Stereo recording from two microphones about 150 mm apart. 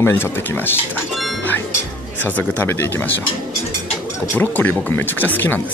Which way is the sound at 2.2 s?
10° left (ahead or behind).